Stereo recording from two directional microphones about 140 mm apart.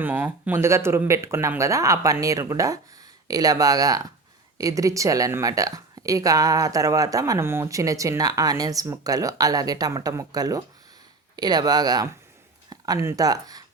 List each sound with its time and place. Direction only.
0.0 s speech: 15° right (ahead or behind)